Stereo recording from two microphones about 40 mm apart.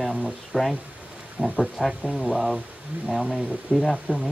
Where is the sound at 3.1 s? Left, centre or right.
Centre.